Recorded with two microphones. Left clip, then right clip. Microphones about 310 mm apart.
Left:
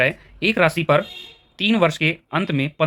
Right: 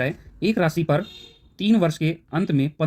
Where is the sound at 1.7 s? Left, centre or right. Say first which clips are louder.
Left 3 dB; left.